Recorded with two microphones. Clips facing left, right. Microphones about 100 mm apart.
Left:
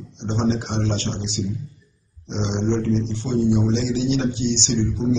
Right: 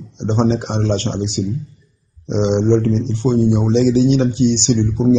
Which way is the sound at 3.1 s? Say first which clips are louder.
Right 7 dB; 40° right (ahead or behind).